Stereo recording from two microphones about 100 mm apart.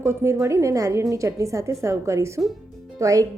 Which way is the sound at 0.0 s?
25° right (ahead or behind).